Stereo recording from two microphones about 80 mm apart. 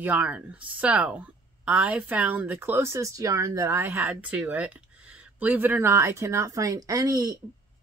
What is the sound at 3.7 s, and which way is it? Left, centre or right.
Speech, right.